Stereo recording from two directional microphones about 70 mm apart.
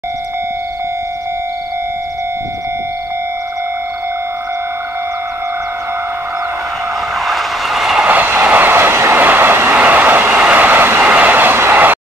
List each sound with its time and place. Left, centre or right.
7.2 s vehicle: centre
8.0 s train: right